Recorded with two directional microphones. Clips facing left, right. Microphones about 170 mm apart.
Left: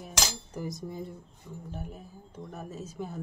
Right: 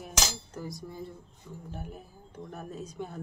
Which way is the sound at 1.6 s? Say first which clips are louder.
Left 1 dB; centre (ahead or behind).